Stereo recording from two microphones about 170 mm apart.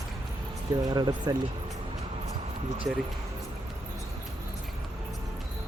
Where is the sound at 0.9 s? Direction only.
25° right (ahead or behind).